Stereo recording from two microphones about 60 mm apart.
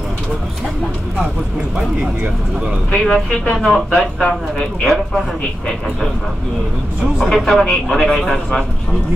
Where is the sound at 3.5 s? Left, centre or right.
Centre.